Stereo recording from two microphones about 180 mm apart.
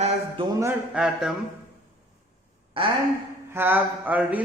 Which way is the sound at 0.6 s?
10° right (ahead or behind).